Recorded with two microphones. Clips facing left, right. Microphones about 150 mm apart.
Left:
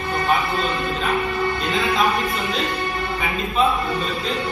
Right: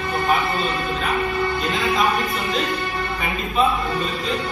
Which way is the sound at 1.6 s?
Centre (ahead or behind).